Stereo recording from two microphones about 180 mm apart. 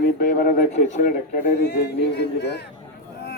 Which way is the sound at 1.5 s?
65° left (ahead or behind).